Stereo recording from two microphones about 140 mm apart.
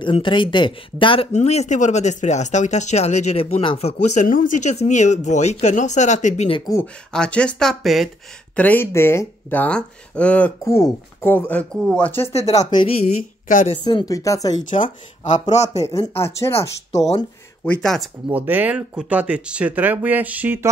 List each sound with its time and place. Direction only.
0.0 s speech: 35° left (ahead or behind)
1.3 s speech: 50° left (ahead or behind)
7.1 s speech: 5° left (ahead or behind)
8.5 s speech: 10° left (ahead or behind)
10.6 s speech: 20° left (ahead or behind)
12.3 s speech: 50° left (ahead or behind)
12.8 s speech: 60° left (ahead or behind)
13.8 s speech: 30° left (ahead or behind)
14.6 s speech: 65° left (ahead or behind)
16.3 s speech: 20° left (ahead or behind)
17.6 s speech: centre (ahead or behind)
18.3 s speech: 10° right (ahead or behind)